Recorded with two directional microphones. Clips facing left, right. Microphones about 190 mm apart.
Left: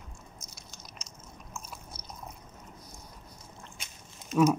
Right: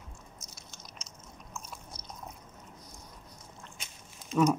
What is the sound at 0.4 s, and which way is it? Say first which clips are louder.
Chewing: left 1 dB; centre (ahead or behind).